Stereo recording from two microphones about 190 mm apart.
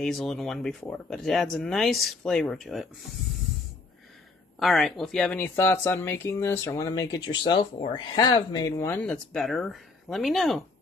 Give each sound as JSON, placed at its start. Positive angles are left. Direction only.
{"t": 0.0, "sound": "speech", "side_deg": 0}
{"t": 4.6, "sound": "speech", "side_deg": 0}